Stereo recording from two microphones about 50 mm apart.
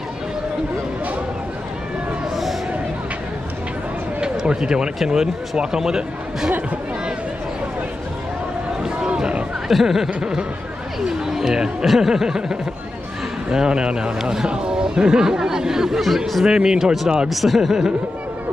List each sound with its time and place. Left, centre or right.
4.2 s speech: centre
8.8 s a sound: centre
9.7 s speech: centre
16.4 s speech: centre
17.3 s speech: centre